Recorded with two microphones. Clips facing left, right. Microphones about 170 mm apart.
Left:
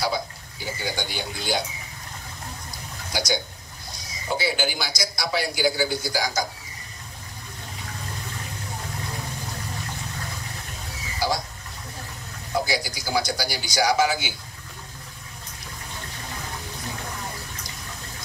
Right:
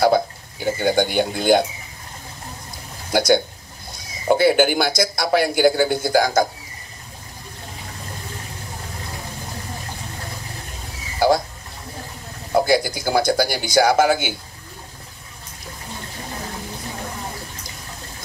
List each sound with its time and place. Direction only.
0.7 s a man's voice: 55° right (ahead or behind)
3.1 s a man's voice: 55° right (ahead or behind)
11.1 s a sound: 55° right (ahead or behind)
12.5 s speech: 55° right (ahead or behind)